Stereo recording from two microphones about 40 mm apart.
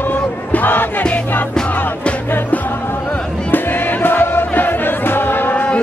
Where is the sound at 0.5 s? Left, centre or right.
Left.